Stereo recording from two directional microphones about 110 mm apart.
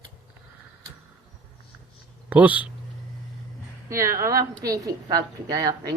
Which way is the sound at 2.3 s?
15° right (ahead or behind).